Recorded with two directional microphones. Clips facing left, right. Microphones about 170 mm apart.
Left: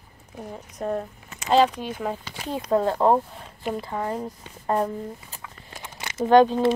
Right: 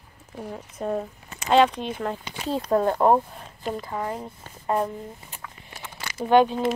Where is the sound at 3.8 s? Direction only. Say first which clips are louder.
Left 2 dB; 35° left (ahead or behind).